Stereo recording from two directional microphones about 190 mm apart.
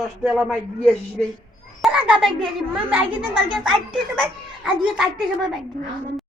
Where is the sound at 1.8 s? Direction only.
5° right (ahead or behind).